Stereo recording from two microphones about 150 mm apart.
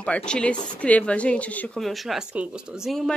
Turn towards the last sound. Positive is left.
turn(degrees=0)  # may be behind; listen again after turning